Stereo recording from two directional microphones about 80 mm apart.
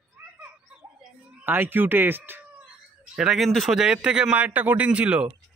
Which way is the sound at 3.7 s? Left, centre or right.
Centre.